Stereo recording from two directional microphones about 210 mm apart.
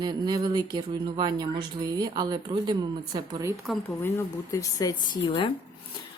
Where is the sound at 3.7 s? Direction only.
10° left (ahead or behind).